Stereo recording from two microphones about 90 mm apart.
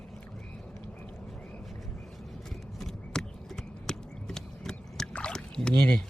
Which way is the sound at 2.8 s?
5° left (ahead or behind).